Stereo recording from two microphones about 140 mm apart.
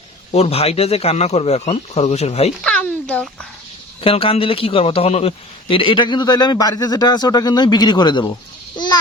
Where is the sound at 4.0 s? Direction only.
40° left (ahead or behind).